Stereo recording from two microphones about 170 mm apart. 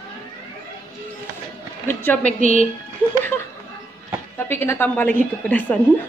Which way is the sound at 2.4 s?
50° right (ahead or behind).